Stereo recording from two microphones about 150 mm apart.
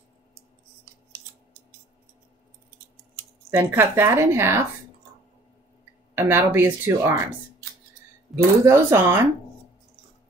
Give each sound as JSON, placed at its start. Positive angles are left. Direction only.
{"t": 3.5, "sound": "speech", "side_deg": -15}
{"t": 6.1, "sound": "speech", "side_deg": -15}
{"t": 8.3, "sound": "speech", "side_deg": 0}
{"t": 8.6, "sound": "speech", "side_deg": -20}